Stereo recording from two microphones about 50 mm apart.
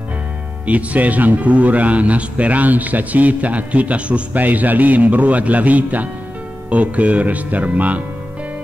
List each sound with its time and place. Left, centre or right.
0.7 s a man's voice: right